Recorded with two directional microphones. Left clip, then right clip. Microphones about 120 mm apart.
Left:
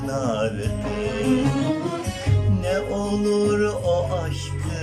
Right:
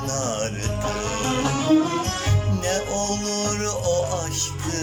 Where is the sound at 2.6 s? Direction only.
20° left (ahead or behind).